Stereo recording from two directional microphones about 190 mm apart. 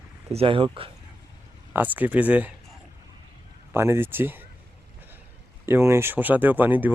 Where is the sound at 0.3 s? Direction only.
25° right (ahead or behind).